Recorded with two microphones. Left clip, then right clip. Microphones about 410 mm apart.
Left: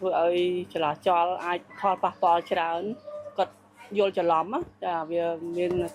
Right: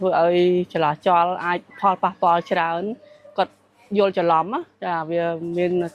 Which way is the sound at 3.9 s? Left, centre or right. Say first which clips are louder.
Right 5 dB; right.